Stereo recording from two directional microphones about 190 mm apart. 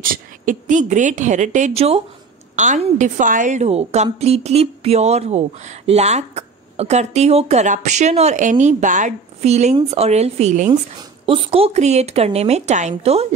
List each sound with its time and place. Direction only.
0.0 s a woman's voice: 45° right (ahead or behind)